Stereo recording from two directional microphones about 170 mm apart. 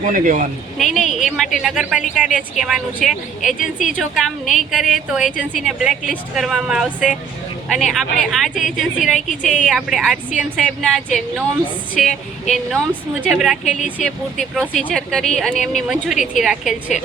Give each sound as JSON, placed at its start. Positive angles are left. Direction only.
{"t": 0.0, "sound": "speech", "side_deg": -50}
{"t": 0.8, "sound": "a woman's voice", "side_deg": 0}
{"t": 12.7, "sound": "a woman's voice", "side_deg": -10}